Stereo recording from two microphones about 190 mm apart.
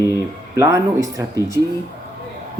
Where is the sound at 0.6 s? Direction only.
15° right (ahead or behind).